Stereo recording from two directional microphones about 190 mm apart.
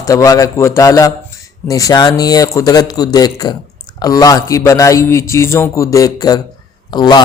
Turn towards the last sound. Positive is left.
turn(degrees=20)  # may be behind; listen again after turning